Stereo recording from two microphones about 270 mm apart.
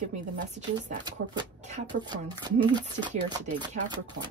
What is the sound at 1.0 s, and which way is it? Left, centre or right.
Speech, centre.